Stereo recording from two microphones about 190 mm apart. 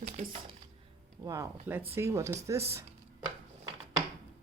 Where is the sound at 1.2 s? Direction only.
15° right (ahead or behind).